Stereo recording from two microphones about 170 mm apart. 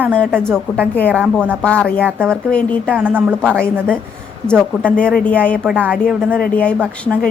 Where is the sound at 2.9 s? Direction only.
10° right (ahead or behind).